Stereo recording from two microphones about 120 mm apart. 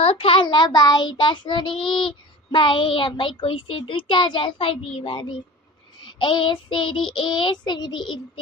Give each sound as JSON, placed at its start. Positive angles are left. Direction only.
{"t": 0.0, "sound": "child singing", "side_deg": 50}